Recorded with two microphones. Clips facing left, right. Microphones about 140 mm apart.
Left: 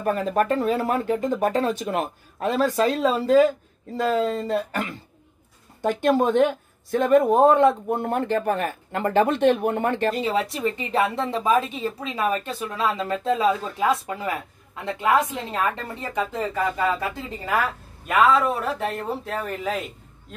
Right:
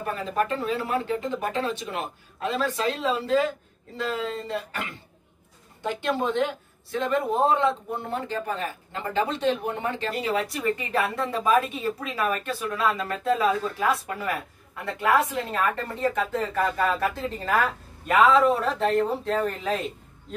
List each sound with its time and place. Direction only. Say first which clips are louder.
0.0 s speech: left 5 dB; 45° left (ahead or behind)
10.2 s a woman's voice: left 2 dB; 25° left (ahead or behind)
15.5 s speech: left 2 dB; 15° left (ahead or behind)
18.1 s speech: right 1 dB; centre (ahead or behind)